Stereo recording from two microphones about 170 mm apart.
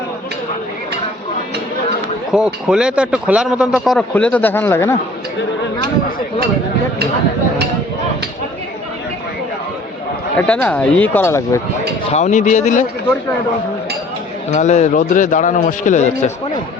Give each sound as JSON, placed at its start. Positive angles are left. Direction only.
{"t": 2.3, "sound": "speech", "side_deg": -5}
{"t": 10.3, "sound": "speech", "side_deg": 10}
{"t": 12.1, "sound": "a man's voice", "side_deg": 45}
{"t": 14.5, "sound": "a man's voice", "side_deg": 45}